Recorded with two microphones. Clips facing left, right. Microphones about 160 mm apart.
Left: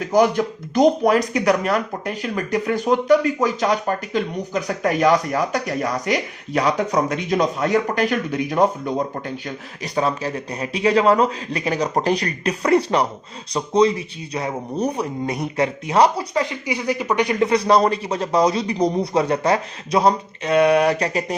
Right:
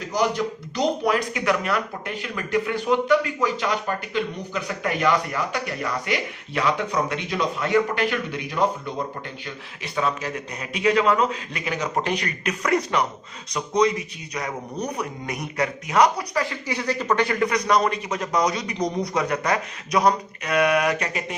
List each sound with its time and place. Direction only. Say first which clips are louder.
0.1 s speech: left 6 dB; 50° left (ahead or behind)
9.8 s a man's voice: left 4 dB; 35° left (ahead or behind)